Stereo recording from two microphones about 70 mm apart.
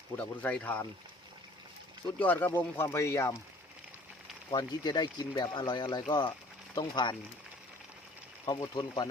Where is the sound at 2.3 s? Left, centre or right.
Left.